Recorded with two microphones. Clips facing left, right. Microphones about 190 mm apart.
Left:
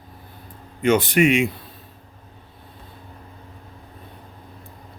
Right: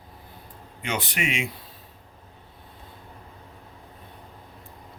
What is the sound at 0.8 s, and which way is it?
Speech, 50° left (ahead or behind).